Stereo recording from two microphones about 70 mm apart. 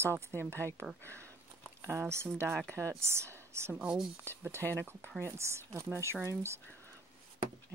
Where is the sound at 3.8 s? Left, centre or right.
Centre.